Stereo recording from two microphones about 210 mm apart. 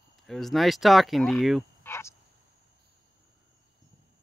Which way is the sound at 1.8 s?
10° left (ahead or behind).